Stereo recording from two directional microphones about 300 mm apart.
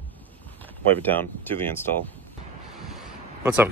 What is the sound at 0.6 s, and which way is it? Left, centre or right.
Speech, centre.